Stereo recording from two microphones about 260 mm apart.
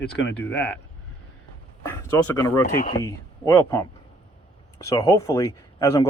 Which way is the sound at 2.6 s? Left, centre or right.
Left.